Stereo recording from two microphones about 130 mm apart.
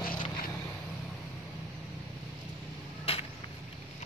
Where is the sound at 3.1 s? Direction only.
45° left (ahead or behind).